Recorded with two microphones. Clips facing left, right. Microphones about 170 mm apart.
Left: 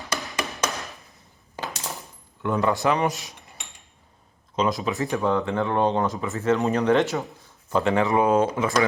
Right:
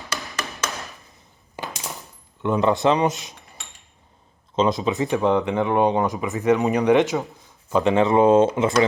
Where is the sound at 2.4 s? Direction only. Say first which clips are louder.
Right 3 dB; 20° right (ahead or behind).